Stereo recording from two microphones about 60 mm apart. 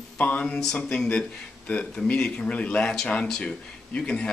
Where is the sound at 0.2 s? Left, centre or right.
Left.